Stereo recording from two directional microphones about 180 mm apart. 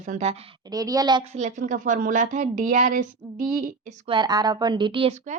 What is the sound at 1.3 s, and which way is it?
A woman's voice, 40° right (ahead or behind).